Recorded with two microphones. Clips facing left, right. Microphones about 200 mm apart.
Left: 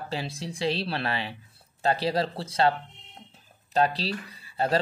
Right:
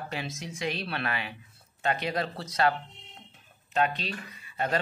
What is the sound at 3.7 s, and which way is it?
Speech, 35° left (ahead or behind).